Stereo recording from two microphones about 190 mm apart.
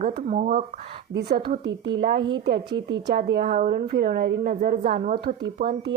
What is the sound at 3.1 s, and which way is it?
A woman's voice, 60° right (ahead or behind).